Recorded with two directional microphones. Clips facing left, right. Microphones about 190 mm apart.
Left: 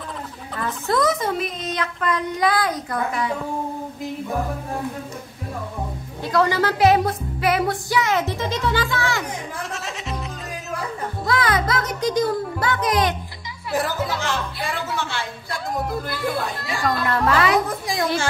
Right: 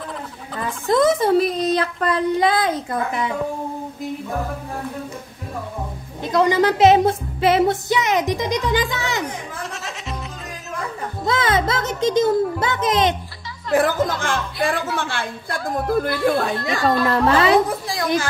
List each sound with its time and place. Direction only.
0.9 s a child's voice: 30° right (ahead or behind)
6.2 s speech: 20° right (ahead or behind)
9.6 s music: centre (ahead or behind)
11.2 s speech: 25° right (ahead or behind)
13.7 s a woman's voice: 55° right (ahead or behind)
16.8 s speech: 30° right (ahead or behind)
17.8 s speech: 20° left (ahead or behind)